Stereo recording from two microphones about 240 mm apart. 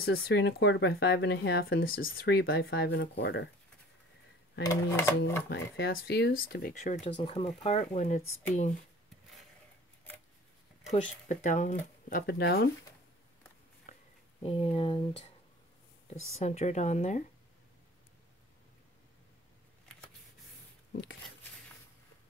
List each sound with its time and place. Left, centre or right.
0.0 s speech: left
2.0 s speech: left
4.6 s speech: centre
5.5 s speech: left
10.9 s speech: left
13.9 s a sound: left
14.4 s speech: left
16.3 s speech: left